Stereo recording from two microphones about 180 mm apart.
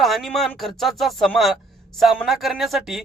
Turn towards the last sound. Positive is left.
turn(degrees=0)  # may be behind; listen again after turning